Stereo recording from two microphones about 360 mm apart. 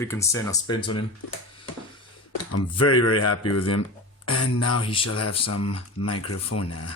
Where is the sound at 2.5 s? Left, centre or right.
Left.